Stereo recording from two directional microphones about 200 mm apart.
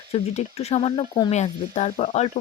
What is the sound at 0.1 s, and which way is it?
Speech, 30° left (ahead or behind).